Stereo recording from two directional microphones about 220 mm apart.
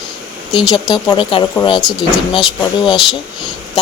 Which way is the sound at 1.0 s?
20° left (ahead or behind).